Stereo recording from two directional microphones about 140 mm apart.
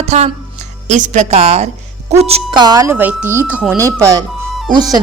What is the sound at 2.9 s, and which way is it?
Speech, 10° right (ahead or behind).